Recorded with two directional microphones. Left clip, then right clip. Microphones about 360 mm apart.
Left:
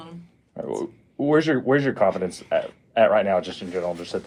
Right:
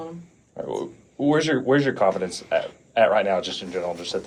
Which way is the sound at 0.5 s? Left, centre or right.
Left.